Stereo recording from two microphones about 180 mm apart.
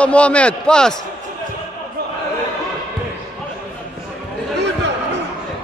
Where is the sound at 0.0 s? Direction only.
5° left (ahead or behind).